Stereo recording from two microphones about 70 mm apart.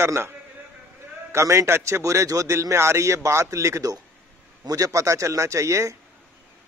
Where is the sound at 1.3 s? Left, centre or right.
Right.